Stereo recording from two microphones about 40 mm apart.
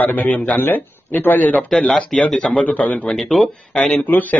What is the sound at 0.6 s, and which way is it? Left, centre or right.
Speech, left.